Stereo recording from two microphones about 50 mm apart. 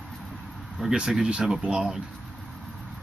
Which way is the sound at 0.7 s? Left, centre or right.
Centre.